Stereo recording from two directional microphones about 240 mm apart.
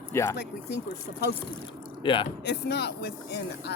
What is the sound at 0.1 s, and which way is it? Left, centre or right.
Speech, centre.